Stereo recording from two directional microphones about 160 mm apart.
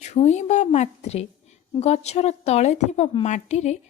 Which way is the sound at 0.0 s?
45° left (ahead or behind).